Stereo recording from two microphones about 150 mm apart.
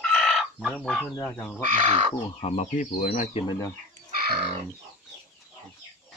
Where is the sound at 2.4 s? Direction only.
50° left (ahead or behind).